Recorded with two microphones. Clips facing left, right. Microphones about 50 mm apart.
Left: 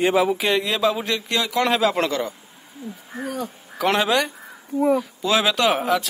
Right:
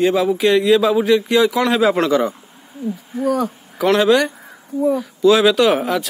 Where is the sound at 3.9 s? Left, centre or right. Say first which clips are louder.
Right 6 dB; centre.